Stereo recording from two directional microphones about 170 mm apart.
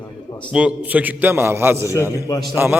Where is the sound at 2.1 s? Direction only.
20° left (ahead or behind).